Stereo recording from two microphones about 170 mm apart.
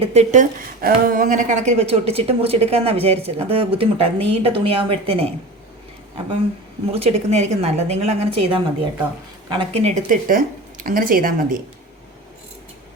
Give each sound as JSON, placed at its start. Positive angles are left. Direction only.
{"t": 0.0, "sound": "a woman's voice", "side_deg": -40}
{"t": 6.9, "sound": "a woman's voice", "side_deg": -40}